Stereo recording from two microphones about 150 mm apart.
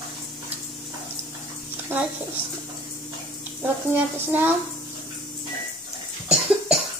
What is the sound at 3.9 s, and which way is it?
Child singing, 15° right (ahead or behind).